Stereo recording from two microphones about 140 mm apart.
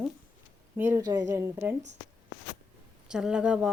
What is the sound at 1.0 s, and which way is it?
Speech, 30° right (ahead or behind).